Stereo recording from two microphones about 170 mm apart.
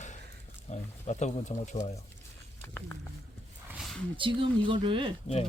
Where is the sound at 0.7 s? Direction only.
40° left (ahead or behind).